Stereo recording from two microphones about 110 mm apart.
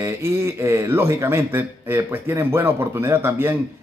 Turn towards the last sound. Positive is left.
turn(degrees=-20)  # may be behind; listen again after turning